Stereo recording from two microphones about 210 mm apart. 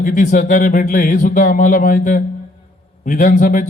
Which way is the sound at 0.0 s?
40° left (ahead or behind).